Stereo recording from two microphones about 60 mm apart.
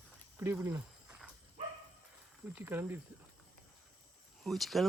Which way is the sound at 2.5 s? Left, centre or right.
Right.